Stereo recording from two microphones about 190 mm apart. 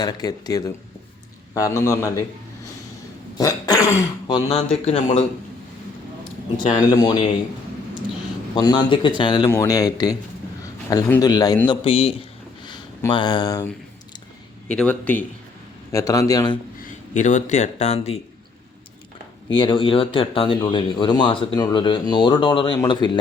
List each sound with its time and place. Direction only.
0.0 s a man's voice: 20° left (ahead or behind)
3.3 s speech: 20° left (ahead or behind); by 5.2 s 35° left (ahead or behind)
6.7 s speech: 20° left (ahead or behind)
8.5 s speech: 20° left (ahead or behind)
14.7 s a man's voice: 5° left (ahead or behind)
17.2 s speech: 40° left (ahead or behind)
19.5 s speech: 25° left (ahead or behind)